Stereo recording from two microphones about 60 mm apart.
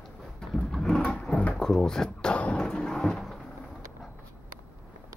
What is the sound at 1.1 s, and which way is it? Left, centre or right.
Drawer open or close, centre.